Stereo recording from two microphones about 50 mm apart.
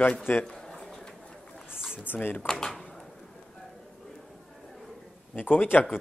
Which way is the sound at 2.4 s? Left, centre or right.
Centre.